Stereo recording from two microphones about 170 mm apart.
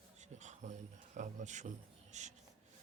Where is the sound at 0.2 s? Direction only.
45° right (ahead or behind).